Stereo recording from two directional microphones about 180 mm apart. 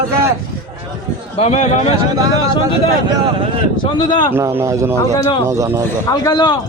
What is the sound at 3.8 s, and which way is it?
Speech, 25° left (ahead or behind).